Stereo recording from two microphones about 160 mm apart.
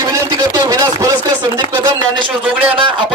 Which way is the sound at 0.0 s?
20° right (ahead or behind).